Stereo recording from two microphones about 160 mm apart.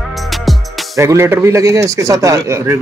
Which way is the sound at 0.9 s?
20° right (ahead or behind).